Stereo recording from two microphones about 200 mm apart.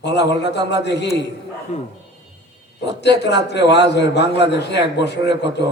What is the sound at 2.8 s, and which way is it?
A man's voice, 60° left (ahead or behind).